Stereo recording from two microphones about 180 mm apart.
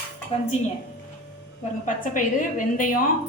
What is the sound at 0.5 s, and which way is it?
Speech, 40° left (ahead or behind).